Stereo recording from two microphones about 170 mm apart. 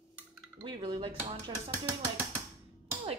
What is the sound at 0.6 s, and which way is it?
Dishes, 25° right (ahead or behind).